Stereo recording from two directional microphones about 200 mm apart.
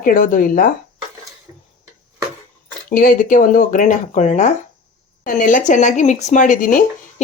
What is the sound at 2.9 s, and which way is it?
Speech, 40° left (ahead or behind).